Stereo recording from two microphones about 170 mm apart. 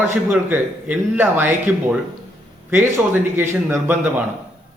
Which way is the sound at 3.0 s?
5° right (ahead or behind).